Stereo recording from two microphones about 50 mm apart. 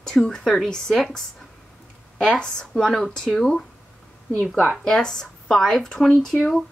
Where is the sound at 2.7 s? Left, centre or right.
Centre.